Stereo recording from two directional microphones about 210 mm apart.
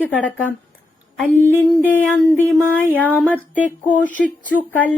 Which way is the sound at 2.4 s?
10° right (ahead or behind).